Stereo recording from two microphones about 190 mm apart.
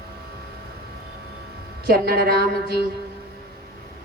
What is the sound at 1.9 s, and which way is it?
Speech, 55° right (ahead or behind).